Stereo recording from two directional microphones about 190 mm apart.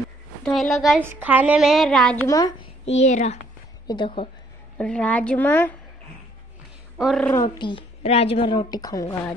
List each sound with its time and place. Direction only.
0.5 s a woman's voice: centre (ahead or behind)
1.0 s a woman's voice: 10° right (ahead or behind)
2.2 s a woman's voice: 15° left (ahead or behind)
2.8 s a child's voice: 35° left (ahead or behind)
3.8 s a woman's voice: 25° left (ahead or behind)
4.7 s a woman's voice: 5° left (ahead or behind)
7.0 s a woman's voice: centre (ahead or behind)
7.2 s a woman's voice: 20° left (ahead or behind)